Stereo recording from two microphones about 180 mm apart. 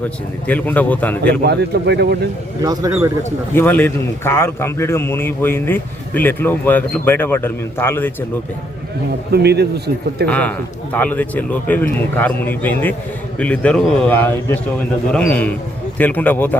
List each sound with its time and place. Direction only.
0.4 s a man's voice: 10° left (ahead or behind)
1.5 s speech: 65° right (ahead or behind)
2.6 s speech: 20° right (ahead or behind)
3.5 s a man's voice: 10° left (ahead or behind)
9.3 s speech: 65° right (ahead or behind)
10.2 s a man's voice: 10° left (ahead or behind)